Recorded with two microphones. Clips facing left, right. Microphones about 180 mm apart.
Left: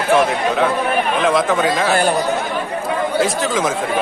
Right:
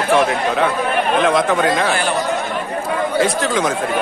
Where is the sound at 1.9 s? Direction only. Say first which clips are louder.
Left 3 dB; 40° left (ahead or behind).